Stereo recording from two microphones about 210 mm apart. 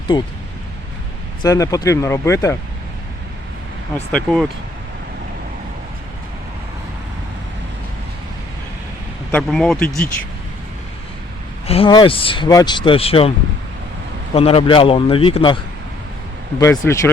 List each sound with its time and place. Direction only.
0.1 s speech: 20° left (ahead or behind)
1.4 s speech: 15° left (ahead or behind)
3.9 s speech: 5° left (ahead or behind)
9.3 s speech: centre (ahead or behind)
11.6 s speech: 25° left (ahead or behind)
14.3 s speech: 25° left (ahead or behind)
16.6 s speech: 15° left (ahead or behind)